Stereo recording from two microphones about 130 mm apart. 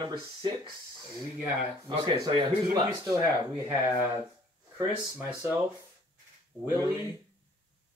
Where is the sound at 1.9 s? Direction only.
35° right (ahead or behind).